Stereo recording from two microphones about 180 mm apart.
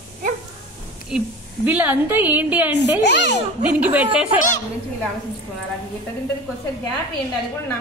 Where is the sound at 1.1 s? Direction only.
5° right (ahead or behind).